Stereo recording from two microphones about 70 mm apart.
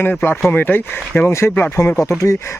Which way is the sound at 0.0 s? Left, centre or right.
Left.